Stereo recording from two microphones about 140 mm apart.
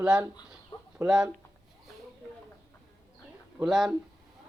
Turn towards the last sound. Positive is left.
turn(degrees=0)  # may be behind; listen again after turning